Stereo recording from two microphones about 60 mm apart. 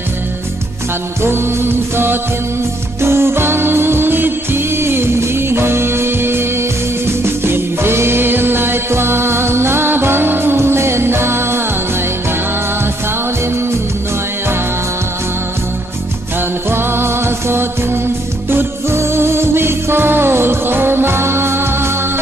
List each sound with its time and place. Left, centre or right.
1.2 s music: right
7.4 s music: right
16.7 s music: right